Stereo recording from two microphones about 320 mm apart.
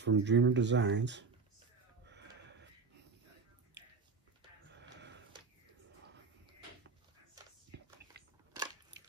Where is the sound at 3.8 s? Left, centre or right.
Right.